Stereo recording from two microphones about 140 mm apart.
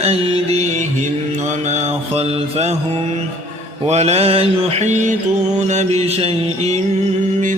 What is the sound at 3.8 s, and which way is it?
Mantra, 50° right (ahead or behind).